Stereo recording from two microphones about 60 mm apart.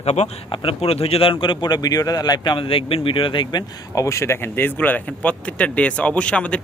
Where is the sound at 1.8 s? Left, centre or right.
Left.